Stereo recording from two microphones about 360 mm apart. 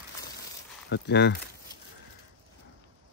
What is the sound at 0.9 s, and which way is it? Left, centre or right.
Speech, left.